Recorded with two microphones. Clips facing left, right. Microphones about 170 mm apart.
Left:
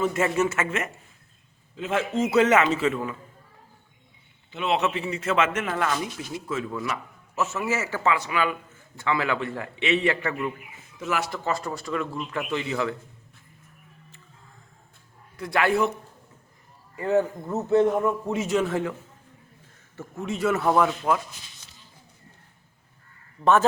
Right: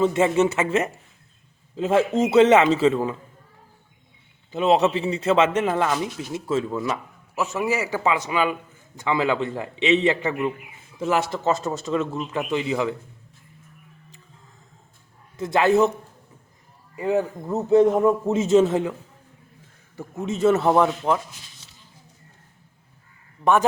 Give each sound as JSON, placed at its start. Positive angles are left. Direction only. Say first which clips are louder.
{"t": 0.0, "sound": "a man's voice", "louder": "right 5 dB", "side_deg": -25}
{"t": 4.5, "sound": "a man's voice", "louder": "right 6 dB", "side_deg": -35}
{"t": 7.3, "sound": "a man's voice", "louder": "right 3 dB", "side_deg": -15}
{"t": 15.4, "sound": "a man's voice", "louder": "right 5 dB", "side_deg": -20}
{"t": 16.9, "sound": "a man's voice", "louder": "even", "side_deg": -15}
{"t": 20.0, "sound": "a man's voice", "louder": "right 5 dB", "side_deg": -20}
{"t": 23.4, "sound": "a man's voice", "louder": "right 1 dB", "side_deg": -15}